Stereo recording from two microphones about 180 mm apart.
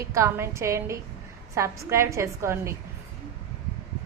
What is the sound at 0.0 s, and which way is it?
A woman's voice, 15° right (ahead or behind).